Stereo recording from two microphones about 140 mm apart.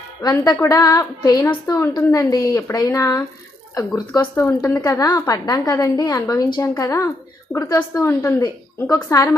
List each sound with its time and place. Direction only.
0.2 s a woman's voice: 25° left (ahead or behind)
4.2 s a woman's voice: 15° left (ahead or behind)